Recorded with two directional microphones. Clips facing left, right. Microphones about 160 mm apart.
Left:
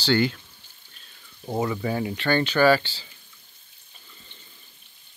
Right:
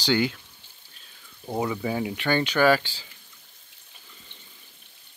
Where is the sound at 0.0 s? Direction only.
10° right (ahead or behind).